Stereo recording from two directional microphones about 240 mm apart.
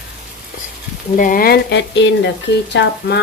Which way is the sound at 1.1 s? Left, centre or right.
Left.